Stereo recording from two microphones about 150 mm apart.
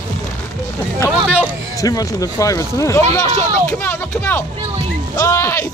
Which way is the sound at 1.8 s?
25° left (ahead or behind).